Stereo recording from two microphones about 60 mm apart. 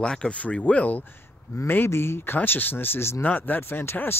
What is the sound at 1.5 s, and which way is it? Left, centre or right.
Speech, left.